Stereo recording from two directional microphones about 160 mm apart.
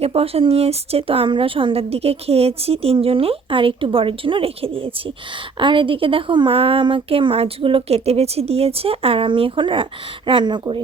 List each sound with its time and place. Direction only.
0.0 s a woman's voice: 40° right (ahead or behind)